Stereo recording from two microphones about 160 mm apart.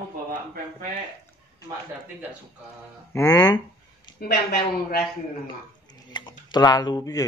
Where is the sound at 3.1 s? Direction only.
20° left (ahead or behind).